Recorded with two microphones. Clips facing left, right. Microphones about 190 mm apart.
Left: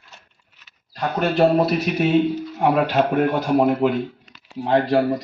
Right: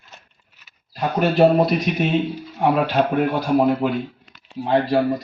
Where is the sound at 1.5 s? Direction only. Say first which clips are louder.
Even; 5° left (ahead or behind).